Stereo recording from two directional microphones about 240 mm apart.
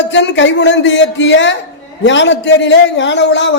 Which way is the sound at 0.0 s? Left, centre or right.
Left.